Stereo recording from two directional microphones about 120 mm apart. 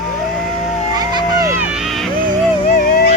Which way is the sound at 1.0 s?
35° right (ahead or behind).